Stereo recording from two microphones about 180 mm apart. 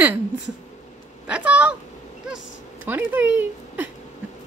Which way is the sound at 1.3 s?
5° right (ahead or behind).